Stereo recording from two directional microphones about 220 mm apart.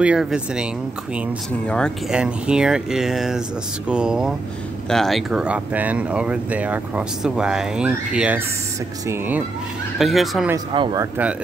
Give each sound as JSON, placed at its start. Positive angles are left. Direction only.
{"t": 0.0, "sound": "speech", "side_deg": -5}
{"t": 1.7, "sound": "speech", "side_deg": 0}
{"t": 10.7, "sound": "speech", "side_deg": -20}